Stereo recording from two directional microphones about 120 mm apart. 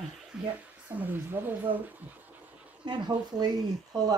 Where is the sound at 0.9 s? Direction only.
15° right (ahead or behind).